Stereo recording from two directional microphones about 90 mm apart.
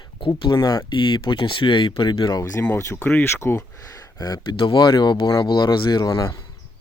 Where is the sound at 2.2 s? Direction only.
40° left (ahead or behind).